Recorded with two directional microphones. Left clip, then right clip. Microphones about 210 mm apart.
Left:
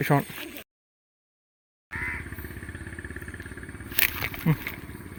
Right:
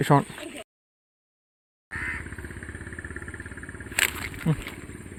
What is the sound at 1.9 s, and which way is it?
Vehicle, 55° right (ahead or behind).